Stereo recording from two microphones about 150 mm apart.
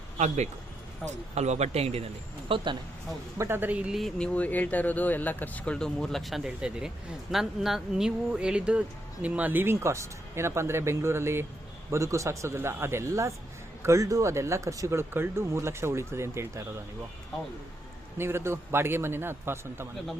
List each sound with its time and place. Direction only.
1.0 s speech: 50° right (ahead or behind)
3.3 s speech: 15° right (ahead or behind)
18.2 s speech: 15° right (ahead or behind)